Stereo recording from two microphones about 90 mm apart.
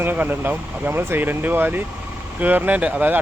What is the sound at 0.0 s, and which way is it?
Speech, 20° right (ahead or behind).